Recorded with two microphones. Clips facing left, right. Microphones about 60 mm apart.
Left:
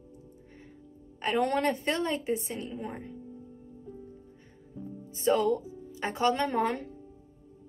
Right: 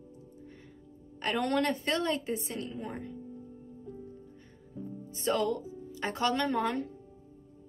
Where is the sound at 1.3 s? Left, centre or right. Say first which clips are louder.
Left 2 dB; left.